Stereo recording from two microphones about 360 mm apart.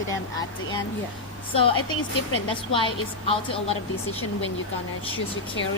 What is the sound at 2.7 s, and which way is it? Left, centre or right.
A woman's voice, centre.